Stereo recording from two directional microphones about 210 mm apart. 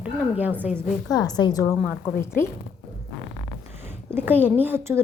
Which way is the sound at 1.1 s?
20° left (ahead or behind).